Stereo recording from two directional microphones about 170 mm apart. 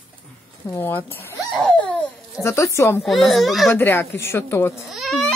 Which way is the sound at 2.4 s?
15° left (ahead or behind).